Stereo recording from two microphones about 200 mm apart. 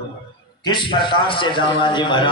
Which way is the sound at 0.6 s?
25° left (ahead or behind).